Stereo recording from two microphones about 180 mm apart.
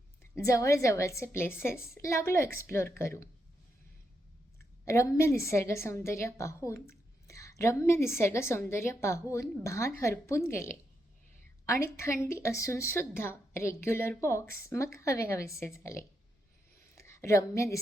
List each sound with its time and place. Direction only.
0.2 s a woman's voice: 15° left (ahead or behind)
4.9 s a woman's voice: 15° left (ahead or behind)
16.9 s a sound: 15° left (ahead or behind)